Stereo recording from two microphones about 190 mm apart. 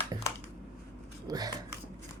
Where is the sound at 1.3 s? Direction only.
20° right (ahead or behind).